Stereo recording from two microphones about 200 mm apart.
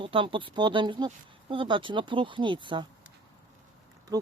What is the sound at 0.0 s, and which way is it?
Speech, 25° right (ahead or behind).